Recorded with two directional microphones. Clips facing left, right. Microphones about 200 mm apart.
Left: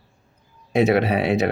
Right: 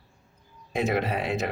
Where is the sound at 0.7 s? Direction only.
75° left (ahead or behind).